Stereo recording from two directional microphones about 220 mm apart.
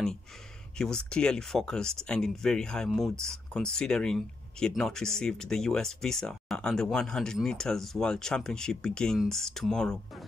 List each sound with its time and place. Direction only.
0.7 s speech: 5° left (ahead or behind)